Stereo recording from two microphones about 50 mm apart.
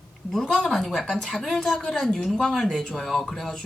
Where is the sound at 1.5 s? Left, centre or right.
Centre.